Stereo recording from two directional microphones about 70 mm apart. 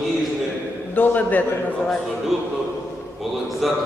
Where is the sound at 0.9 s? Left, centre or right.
Left.